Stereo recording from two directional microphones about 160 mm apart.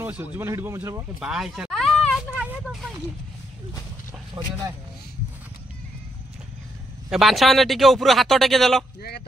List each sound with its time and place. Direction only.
0.0 s speech: 15° right (ahead or behind)
1.2 s a sound: centre (ahead or behind)
2.3 s speech: 10° right (ahead or behind)
7.1 s speech: centre (ahead or behind)